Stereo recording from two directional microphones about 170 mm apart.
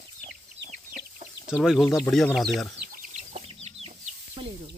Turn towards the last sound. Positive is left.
turn(degrees=-30)  # may be behind; listen again after turning